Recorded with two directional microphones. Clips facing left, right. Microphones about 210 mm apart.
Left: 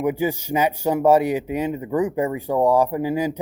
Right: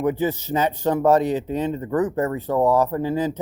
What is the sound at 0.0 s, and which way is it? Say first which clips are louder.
Speech: even; 10° left (ahead or behind).